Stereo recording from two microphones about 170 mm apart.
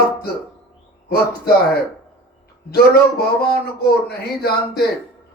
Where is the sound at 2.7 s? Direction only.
65° left (ahead or behind).